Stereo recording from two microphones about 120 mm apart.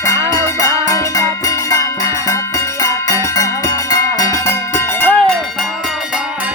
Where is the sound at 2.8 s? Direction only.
25° left (ahead or behind).